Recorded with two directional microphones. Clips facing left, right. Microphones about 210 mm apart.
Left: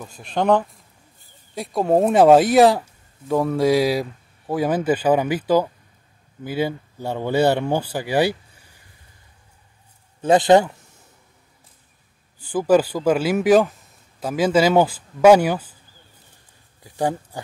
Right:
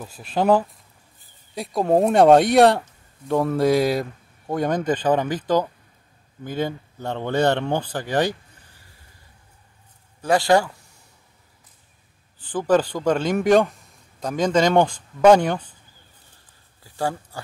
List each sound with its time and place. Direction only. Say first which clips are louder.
0.2 s a man's voice: even; 5° right (ahead or behind); by 8.7 s 10° left (ahead or behind)
10.2 s a man's voice: left 4 dB; 20° left (ahead or behind)
12.4 s speech: left 3 dB; 10° left (ahead or behind)
16.8 s a sound: left 3 dB; 20° left (ahead or behind)